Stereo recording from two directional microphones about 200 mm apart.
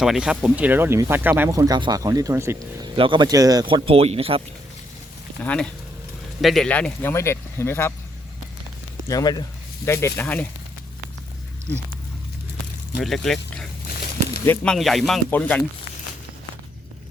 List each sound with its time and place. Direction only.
0.0 s speech: 5° right (ahead or behind)
2.9 s speech: 25° right (ahead or behind)
5.4 s speech: 5° left (ahead or behind)
9.0 s speech: 20° left (ahead or behind)
13.0 s speech: centre (ahead or behind)